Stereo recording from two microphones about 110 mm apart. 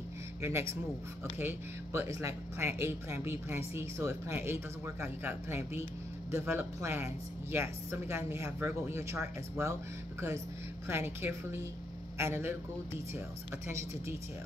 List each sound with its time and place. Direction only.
0.4 s speech: 20° right (ahead or behind)
10.9 s speech: 20° right (ahead or behind)
13.7 s speech: 25° right (ahead or behind)